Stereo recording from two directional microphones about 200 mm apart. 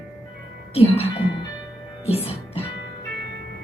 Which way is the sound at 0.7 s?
30° left (ahead or behind).